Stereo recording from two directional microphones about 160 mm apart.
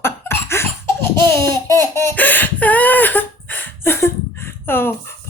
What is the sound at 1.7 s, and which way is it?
Laughter, 15° left (ahead or behind).